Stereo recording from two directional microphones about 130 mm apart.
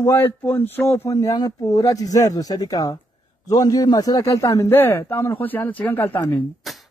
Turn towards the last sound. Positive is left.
turn(degrees=0)  # may be behind; listen again after turning